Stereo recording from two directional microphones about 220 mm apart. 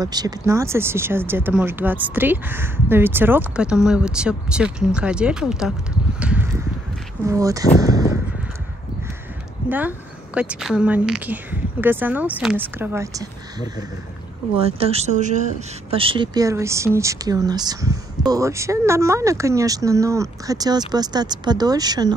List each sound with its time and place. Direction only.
0.0 s speech: 15° right (ahead or behind)
7.8 s a sound: 15° right (ahead or behind)
9.7 s speech: 10° right (ahead or behind)
14.6 s speech: 25° right (ahead or behind)